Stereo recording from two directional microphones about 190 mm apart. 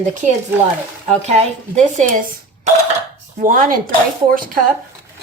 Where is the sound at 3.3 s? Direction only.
45° right (ahead or behind).